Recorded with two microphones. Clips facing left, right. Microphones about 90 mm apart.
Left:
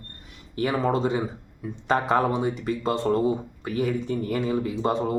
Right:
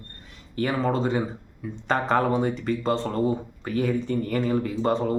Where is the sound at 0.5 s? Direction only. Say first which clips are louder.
Left 1 dB; 15° left (ahead or behind).